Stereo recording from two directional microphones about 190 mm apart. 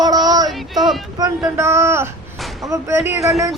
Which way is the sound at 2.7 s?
15° right (ahead or behind).